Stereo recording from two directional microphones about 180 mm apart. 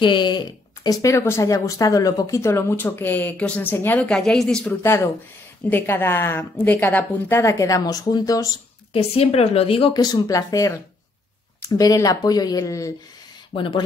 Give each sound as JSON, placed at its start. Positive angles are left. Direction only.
{"t": 0.0, "sound": "speech", "side_deg": 25}
{"t": 8.9, "sound": "a woman's voice", "side_deg": 35}
{"t": 10.2, "sound": "speech", "side_deg": 20}
{"t": 11.8, "sound": "speech", "side_deg": 20}